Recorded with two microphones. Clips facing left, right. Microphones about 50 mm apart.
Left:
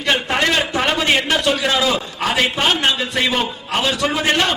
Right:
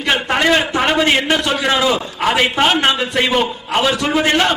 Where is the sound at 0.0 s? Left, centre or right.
Centre.